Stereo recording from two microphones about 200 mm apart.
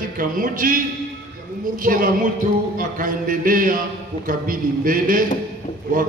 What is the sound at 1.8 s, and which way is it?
A man's voice, 45° right (ahead or behind).